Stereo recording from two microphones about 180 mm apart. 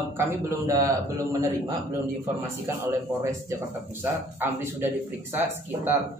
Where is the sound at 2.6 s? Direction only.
15° right (ahead or behind).